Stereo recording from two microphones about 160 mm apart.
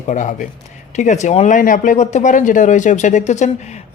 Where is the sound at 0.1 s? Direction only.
55° left (ahead or behind).